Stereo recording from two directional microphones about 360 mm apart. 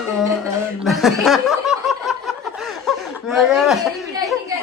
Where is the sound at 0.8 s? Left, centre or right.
Centre.